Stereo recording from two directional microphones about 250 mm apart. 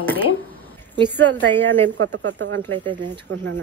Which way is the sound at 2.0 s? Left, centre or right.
Right.